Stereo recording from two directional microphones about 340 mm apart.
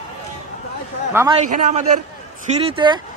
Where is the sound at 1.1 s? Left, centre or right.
Centre.